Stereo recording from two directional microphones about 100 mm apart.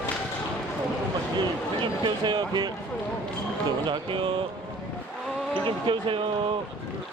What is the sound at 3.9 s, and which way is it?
Speech, 55° right (ahead or behind).